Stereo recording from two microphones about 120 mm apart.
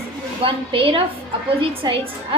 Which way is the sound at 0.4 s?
50° right (ahead or behind).